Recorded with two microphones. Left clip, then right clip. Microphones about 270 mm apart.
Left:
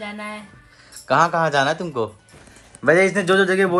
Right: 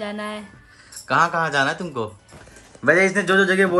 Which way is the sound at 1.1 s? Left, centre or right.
Centre.